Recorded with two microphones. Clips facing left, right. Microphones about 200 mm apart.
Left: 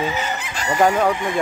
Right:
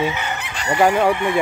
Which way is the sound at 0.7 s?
10° right (ahead or behind).